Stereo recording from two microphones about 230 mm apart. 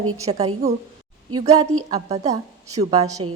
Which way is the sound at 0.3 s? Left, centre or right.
Right.